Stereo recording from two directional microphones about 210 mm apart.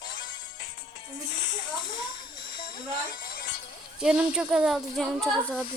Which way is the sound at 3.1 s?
45° left (ahead or behind).